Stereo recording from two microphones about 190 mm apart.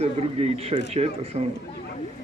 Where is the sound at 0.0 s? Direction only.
35° right (ahead or behind).